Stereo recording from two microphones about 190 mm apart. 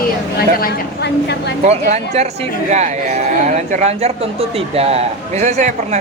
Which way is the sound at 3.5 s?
40° right (ahead or behind).